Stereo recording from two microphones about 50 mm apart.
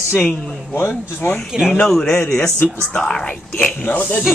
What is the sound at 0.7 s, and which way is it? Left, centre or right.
Speech, left.